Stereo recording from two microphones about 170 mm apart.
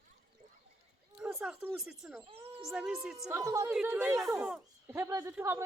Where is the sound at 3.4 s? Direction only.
20° right (ahead or behind).